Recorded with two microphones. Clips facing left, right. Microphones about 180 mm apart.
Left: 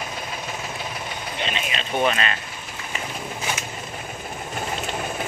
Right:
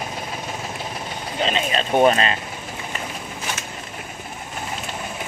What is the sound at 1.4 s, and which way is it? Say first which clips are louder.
Speech: right 8 dB; 40° right (ahead or behind).